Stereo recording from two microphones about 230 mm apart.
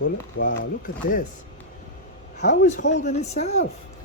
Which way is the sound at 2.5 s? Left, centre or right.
Left.